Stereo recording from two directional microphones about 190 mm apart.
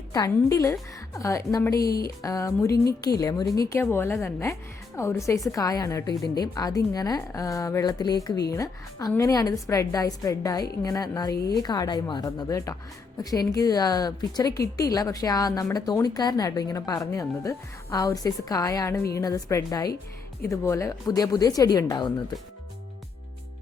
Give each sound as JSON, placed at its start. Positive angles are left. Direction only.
{"t": 0.1, "sound": "a woman's voice", "side_deg": 15}